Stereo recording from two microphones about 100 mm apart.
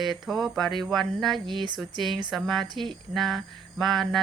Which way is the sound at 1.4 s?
50° right (ahead or behind).